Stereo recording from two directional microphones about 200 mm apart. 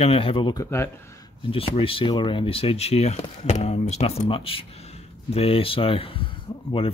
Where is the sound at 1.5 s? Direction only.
25° left (ahead or behind).